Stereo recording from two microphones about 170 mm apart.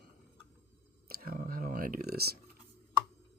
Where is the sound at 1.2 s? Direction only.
55° right (ahead or behind).